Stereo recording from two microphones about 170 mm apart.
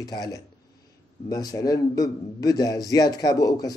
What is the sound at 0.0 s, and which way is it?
Speech, 20° left (ahead or behind).